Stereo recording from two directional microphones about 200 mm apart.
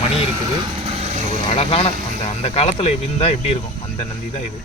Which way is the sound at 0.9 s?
30° right (ahead or behind).